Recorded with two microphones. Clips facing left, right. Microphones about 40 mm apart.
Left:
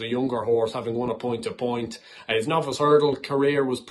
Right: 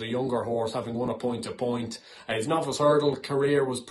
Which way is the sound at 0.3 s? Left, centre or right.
Left.